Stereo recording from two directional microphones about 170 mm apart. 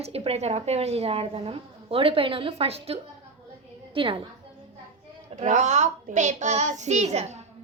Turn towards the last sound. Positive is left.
turn(degrees=-40)  # may be behind; listen again after turning